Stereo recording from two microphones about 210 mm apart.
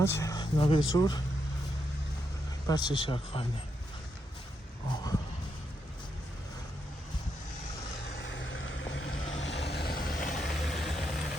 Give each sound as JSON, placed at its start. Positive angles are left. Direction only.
{"t": 0.0, "sound": "speech", "side_deg": 15}
{"t": 2.6, "sound": "speech", "side_deg": 20}
{"t": 4.9, "sound": "speech", "side_deg": 20}
{"t": 8.2, "sound": "vehicle", "side_deg": 60}
{"t": 9.4, "sound": "vehicle", "side_deg": 55}
{"t": 10.3, "sound": "vehicle", "side_deg": 0}